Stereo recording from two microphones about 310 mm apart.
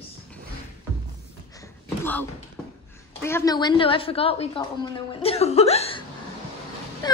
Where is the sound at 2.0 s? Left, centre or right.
Centre.